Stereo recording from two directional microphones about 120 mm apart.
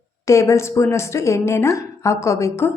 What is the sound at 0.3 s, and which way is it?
A woman's voice, 25° left (ahead or behind).